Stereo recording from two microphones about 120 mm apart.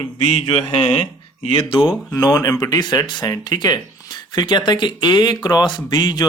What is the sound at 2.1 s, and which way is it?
Speech, 30° left (ahead or behind).